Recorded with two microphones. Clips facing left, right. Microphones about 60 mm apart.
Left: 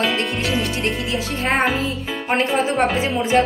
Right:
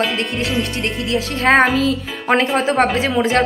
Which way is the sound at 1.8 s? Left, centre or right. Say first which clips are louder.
Right 5 dB; right.